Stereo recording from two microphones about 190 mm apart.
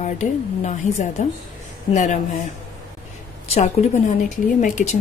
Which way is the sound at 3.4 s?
35° left (ahead or behind).